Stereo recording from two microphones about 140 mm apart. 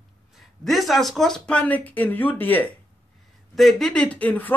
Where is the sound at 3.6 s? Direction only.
Centre (ahead or behind).